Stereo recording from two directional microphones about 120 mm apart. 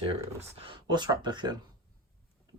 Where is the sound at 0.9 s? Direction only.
35° right (ahead or behind).